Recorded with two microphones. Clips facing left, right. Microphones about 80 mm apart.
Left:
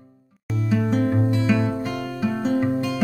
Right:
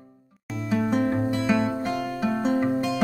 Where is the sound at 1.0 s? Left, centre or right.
Centre.